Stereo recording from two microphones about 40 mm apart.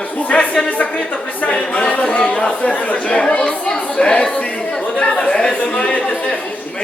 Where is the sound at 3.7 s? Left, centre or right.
Left.